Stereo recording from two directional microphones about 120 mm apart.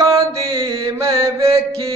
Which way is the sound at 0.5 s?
45° right (ahead or behind).